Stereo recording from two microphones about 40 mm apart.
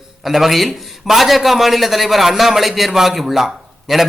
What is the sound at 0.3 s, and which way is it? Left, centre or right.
A man's voice, centre.